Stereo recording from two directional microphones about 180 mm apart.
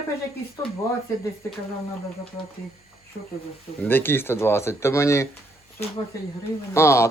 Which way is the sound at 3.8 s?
10° left (ahead or behind).